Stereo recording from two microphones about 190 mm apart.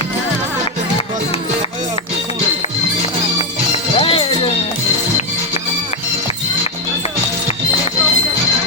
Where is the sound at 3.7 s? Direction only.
30° left (ahead or behind).